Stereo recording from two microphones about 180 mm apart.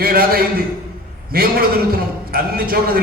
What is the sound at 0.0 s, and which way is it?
A man's voice, 55° right (ahead or behind).